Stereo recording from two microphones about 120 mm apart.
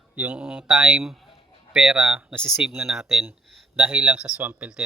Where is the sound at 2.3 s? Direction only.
5° left (ahead or behind).